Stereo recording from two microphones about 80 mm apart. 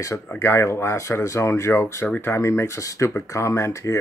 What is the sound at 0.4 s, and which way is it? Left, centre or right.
Speech, left.